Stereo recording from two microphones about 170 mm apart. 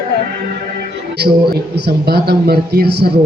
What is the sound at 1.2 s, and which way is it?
A man's voice, 70° right (ahead or behind).